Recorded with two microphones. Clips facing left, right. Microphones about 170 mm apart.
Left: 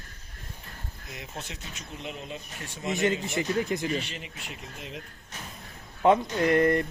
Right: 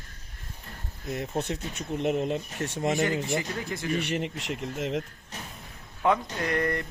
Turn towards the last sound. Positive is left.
turn(degrees=25)  # may be behind; listen again after turning